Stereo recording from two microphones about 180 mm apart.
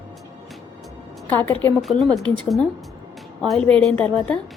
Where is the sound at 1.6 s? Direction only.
Centre (ahead or behind).